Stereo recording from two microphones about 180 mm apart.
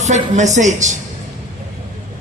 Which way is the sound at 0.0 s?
40° right (ahead or behind).